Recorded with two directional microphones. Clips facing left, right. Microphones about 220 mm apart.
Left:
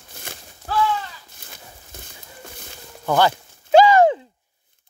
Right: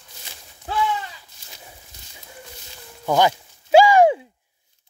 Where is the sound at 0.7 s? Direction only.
20° right (ahead or behind).